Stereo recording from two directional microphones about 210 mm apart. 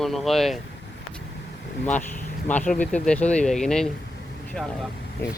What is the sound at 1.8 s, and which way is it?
Speech, 10° left (ahead or behind).